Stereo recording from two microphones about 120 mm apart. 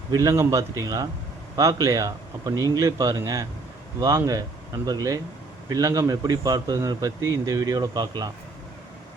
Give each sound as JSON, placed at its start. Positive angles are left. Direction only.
{"t": 0.1, "sound": "a man's voice", "side_deg": -30}